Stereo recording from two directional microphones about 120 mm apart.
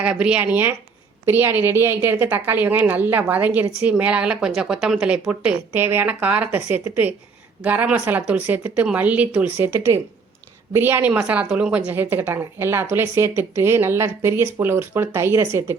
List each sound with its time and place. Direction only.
0.0 s a woman's voice: 10° right (ahead or behind)